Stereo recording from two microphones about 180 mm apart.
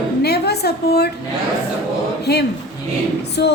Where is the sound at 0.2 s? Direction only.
65° left (ahead or behind).